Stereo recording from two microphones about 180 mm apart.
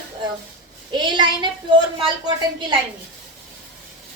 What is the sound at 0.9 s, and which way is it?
A woman's voice, 25° right (ahead or behind).